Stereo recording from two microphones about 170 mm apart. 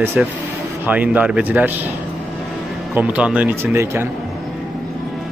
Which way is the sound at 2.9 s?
5° right (ahead or behind).